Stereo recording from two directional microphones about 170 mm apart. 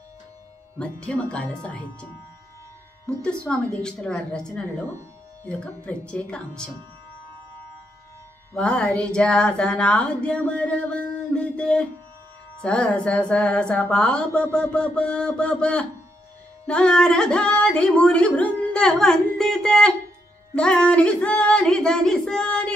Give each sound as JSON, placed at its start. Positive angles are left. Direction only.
{"t": 0.7, "sound": "speech", "side_deg": 5}
{"t": 3.1, "sound": "speech", "side_deg": 5}
{"t": 8.5, "sound": "speech", "side_deg": 5}